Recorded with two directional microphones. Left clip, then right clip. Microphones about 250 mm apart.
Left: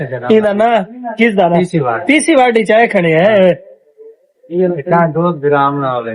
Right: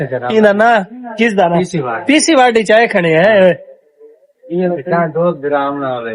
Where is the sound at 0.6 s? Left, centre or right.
Centre.